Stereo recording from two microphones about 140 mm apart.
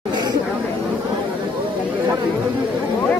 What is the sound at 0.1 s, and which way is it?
Chatter, 30° right (ahead or behind).